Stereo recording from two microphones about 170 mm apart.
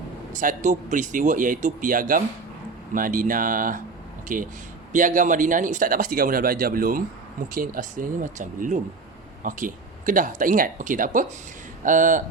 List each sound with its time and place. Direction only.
0.3 s speech: 50° right (ahead or behind)